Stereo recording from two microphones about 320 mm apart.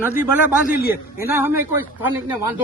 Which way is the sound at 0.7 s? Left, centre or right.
Left.